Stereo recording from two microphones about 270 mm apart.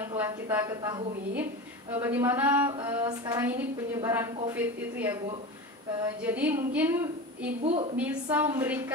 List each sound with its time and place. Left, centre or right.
0.2 s a woman's voice: centre
7.6 s a woman's voice: right
8.0 s a woman's voice: centre